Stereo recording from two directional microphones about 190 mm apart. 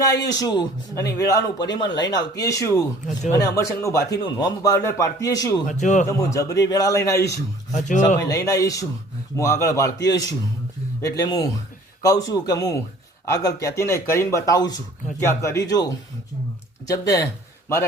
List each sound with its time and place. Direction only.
0.3 s a man's voice: 20° left (ahead or behind)
5.6 s a man's voice: 40° left (ahead or behind)
6.1 s a man's voice: 15° left (ahead or behind)
7.7 s a man's voice: 40° left (ahead or behind)
8.2 s a man's voice: 15° left (ahead or behind)